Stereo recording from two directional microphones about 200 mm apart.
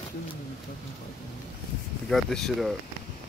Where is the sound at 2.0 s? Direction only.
Centre (ahead or behind).